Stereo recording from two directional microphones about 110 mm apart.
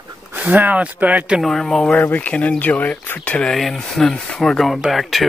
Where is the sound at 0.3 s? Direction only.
15° right (ahead or behind).